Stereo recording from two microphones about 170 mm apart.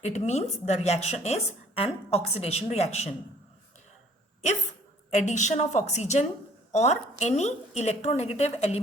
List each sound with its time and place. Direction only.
0.0 s a woman's voice: 40° left (ahead or behind)
5.1 s a woman's voice: 45° left (ahead or behind)